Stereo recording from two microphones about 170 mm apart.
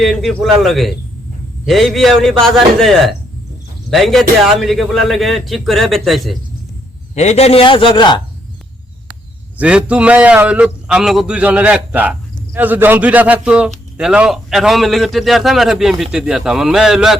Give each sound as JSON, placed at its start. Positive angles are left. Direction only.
{"t": 0.0, "sound": "a man's voice", "side_deg": 0}
{"t": 7.2, "sound": "a man's voice", "side_deg": 40}
{"t": 9.6, "sound": "a man's voice", "side_deg": -5}